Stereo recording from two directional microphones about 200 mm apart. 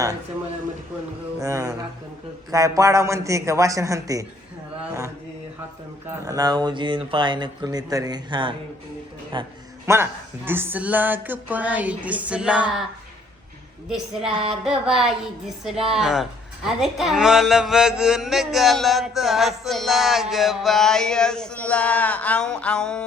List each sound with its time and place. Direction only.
1.4 s speech: 15° right (ahead or behind)
9.8 s speech: 10° right (ahead or behind)
13.9 s speech: centre (ahead or behind)